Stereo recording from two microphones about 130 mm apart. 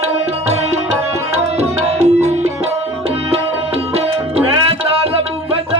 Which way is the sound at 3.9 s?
50° right (ahead or behind).